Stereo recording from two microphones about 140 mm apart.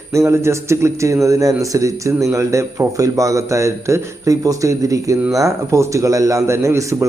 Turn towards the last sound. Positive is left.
turn(degrees=-20)  # may be behind; listen again after turning